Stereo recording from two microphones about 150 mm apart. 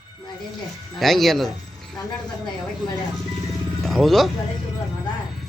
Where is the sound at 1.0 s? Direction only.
Centre (ahead or behind).